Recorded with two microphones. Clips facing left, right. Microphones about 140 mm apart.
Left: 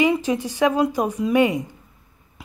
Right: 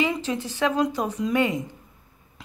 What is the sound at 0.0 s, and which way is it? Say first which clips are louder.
Speech: left 6 dB; 15° left (ahead or behind).